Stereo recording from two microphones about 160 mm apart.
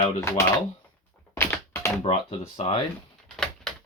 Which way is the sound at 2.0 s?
35° left (ahead or behind).